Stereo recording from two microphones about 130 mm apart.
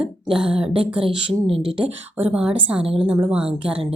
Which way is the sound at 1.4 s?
45° right (ahead or behind).